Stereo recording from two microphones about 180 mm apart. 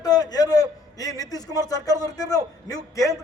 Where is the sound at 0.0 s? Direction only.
20° left (ahead or behind).